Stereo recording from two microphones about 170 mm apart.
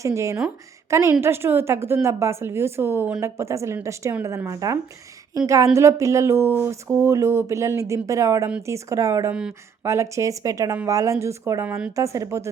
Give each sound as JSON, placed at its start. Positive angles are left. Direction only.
{"t": 0.0, "sound": "a woman's voice", "side_deg": -15}
{"t": 9.3, "sound": "speech", "side_deg": -5}
{"t": 9.8, "sound": "a woman's voice", "side_deg": -15}